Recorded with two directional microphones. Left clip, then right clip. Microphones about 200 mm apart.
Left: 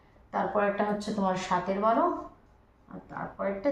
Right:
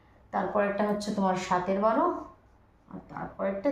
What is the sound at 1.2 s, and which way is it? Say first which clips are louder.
Speech: right 1 dB; 20° right (ahead or behind).